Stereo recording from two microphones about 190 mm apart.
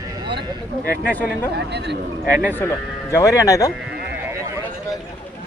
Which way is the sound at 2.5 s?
10° left (ahead or behind).